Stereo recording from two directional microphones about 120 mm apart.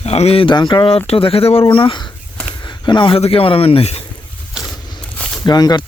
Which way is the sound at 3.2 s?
50° left (ahead or behind).